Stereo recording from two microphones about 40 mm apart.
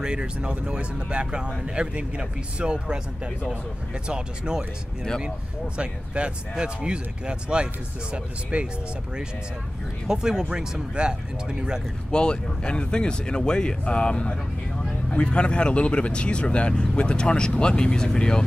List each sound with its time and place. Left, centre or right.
0.0 s speech: right
4.1 s speech: right
5.8 s speech: right
10.0 s speech: centre
12.1 s speech: left